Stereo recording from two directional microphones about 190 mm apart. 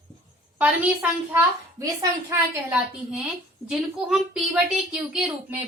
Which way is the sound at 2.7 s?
5° right (ahead or behind).